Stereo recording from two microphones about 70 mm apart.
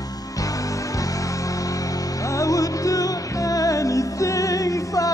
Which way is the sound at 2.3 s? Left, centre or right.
Left.